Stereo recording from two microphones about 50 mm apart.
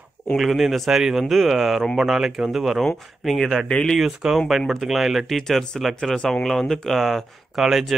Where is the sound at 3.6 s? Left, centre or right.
Left.